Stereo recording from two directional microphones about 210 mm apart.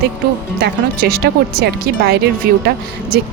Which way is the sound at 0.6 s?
45° right (ahead or behind).